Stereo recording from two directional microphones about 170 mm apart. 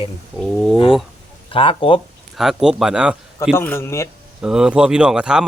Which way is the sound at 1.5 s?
30° left (ahead or behind).